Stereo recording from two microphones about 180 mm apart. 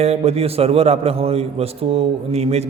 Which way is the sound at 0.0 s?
35° right (ahead or behind).